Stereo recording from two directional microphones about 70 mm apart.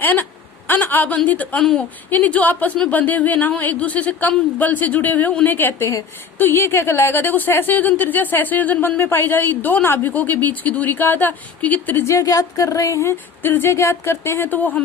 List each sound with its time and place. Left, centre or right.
0.0 s a woman's voice: left
1.5 s speech: centre
2.0 s speech: left
12.0 s a woman's voice: left
13.4 s speech: left